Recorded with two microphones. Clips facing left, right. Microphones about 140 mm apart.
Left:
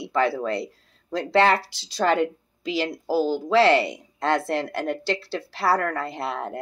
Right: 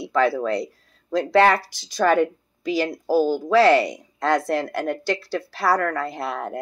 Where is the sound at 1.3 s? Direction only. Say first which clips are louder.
Right 2 dB; 20° left (ahead or behind).